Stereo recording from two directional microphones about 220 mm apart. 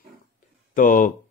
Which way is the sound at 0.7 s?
35° left (ahead or behind).